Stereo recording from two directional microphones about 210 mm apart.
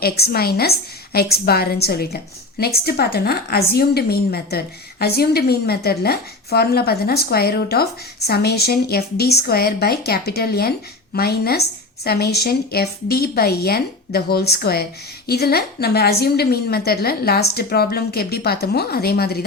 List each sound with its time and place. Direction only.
0.0 s a woman's voice: 45° left (ahead or behind)